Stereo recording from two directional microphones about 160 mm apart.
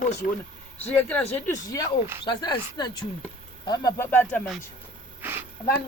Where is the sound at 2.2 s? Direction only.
25° left (ahead or behind); by 4.4 s 10° left (ahead or behind).